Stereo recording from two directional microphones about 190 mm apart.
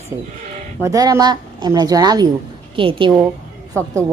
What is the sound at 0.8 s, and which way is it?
Speech, 20° right (ahead or behind).